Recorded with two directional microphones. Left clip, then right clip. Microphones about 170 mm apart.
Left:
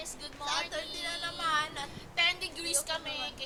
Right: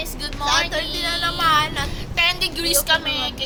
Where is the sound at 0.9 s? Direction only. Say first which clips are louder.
Right 14 dB; 20° right (ahead or behind).